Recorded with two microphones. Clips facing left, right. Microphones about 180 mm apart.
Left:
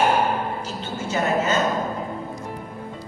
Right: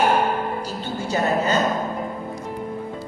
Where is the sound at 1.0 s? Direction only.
35° right (ahead or behind).